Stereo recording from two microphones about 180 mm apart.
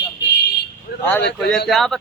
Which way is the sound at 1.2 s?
70° left (ahead or behind).